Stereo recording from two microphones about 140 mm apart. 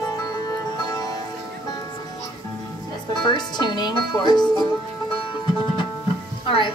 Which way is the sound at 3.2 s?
30° left (ahead or behind).